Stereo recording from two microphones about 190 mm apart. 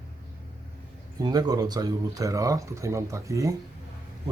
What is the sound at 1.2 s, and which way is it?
Speech, 20° right (ahead or behind).